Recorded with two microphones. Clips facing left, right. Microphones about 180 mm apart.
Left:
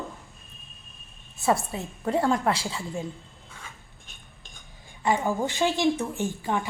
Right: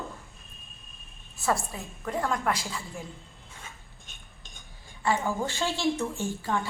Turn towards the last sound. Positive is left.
turn(degrees=15)  # may be behind; listen again after turning